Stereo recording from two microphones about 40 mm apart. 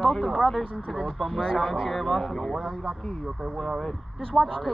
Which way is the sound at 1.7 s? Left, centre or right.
Centre.